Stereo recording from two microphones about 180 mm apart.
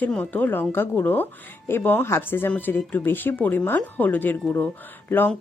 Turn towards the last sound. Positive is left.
turn(degrees=10)  # may be behind; listen again after turning